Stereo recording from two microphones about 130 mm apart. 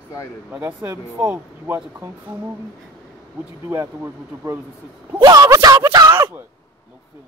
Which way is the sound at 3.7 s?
20° right (ahead or behind).